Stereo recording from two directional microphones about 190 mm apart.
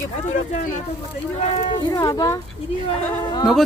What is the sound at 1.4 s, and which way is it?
Speech, 35° left (ahead or behind).